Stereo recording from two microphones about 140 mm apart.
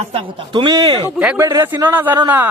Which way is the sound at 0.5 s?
30° right (ahead or behind).